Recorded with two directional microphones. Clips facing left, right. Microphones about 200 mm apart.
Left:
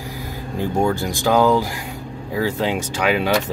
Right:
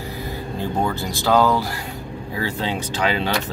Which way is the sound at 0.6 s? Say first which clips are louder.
Left 4 dB; 15° left (ahead or behind).